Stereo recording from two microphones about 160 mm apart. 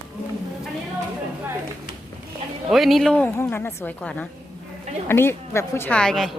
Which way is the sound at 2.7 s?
Centre (ahead or behind).